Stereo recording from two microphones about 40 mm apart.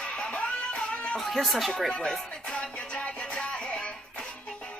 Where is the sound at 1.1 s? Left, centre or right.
Centre.